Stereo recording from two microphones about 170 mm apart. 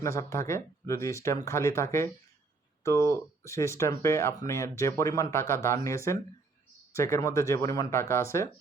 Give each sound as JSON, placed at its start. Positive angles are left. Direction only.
{"t": 0.0, "sound": "speech", "side_deg": 15}